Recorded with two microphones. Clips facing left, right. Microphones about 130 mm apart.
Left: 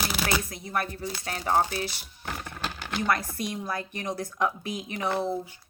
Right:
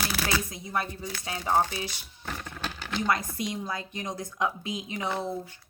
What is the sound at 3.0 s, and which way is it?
A woman's voice, 20° right (ahead or behind).